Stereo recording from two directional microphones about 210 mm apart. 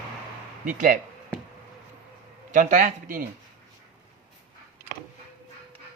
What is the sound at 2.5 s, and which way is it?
Speech, 40° right (ahead or behind).